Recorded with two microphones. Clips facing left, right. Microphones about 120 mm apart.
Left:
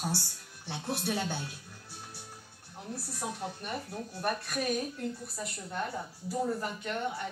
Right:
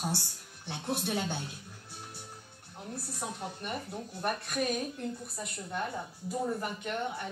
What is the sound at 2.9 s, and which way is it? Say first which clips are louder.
Speech: left 1 dB; 20° right (ahead or behind).